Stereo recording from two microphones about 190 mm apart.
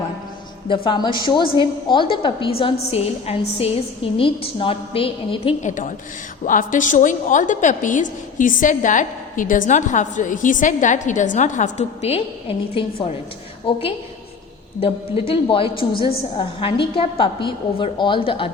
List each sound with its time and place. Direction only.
0.7 s a woman's voice: 25° left (ahead or behind)